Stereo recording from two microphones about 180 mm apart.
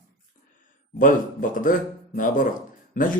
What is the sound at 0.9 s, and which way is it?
A man's voice, 50° left (ahead or behind).